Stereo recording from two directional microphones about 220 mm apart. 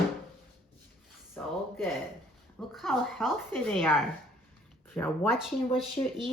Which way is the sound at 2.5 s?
Centre (ahead or behind).